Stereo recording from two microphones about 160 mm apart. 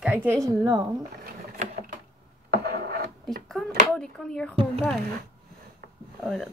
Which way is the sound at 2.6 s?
75° right (ahead or behind).